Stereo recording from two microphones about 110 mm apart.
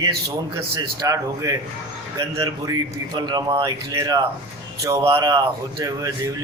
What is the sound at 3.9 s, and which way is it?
A man's voice, 30° right (ahead or behind).